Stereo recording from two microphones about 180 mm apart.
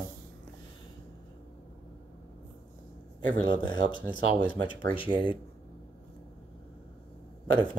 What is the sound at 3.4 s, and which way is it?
Speech, 25° left (ahead or behind).